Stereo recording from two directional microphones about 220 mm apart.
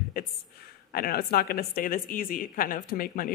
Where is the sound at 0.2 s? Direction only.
40° left (ahead or behind).